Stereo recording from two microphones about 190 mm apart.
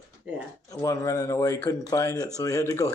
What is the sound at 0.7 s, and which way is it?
Speech, 15° left (ahead or behind).